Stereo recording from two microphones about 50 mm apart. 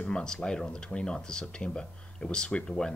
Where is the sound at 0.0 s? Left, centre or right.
Centre.